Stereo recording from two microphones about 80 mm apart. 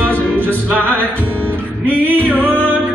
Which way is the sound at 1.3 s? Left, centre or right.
Centre.